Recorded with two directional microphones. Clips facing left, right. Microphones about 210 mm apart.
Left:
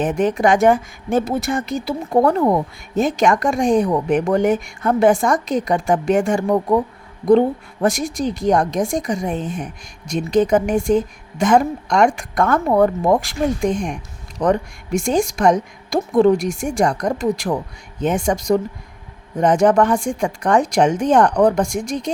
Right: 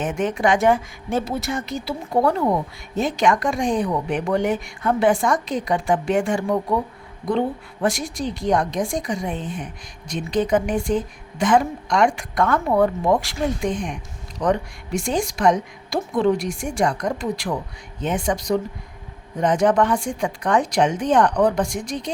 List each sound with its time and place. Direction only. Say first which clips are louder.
0.0 s a woman's voice: left 4 dB; 35° left (ahead or behind)